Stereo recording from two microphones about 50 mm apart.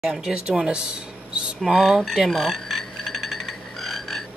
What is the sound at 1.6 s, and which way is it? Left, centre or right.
Frog, centre.